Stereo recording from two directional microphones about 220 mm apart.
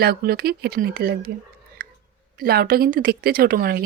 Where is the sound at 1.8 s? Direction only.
40° right (ahead or behind).